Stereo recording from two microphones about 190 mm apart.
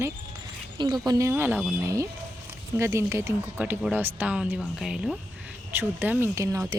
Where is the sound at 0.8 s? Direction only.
20° right (ahead or behind).